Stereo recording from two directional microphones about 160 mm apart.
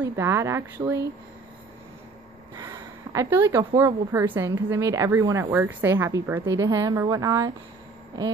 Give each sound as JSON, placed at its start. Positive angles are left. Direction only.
{"t": 0.0, "sound": "speech", "side_deg": -15}
{"t": 2.5, "sound": "a woman's voice", "side_deg": -25}